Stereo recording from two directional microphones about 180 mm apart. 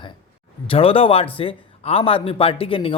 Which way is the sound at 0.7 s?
30° left (ahead or behind).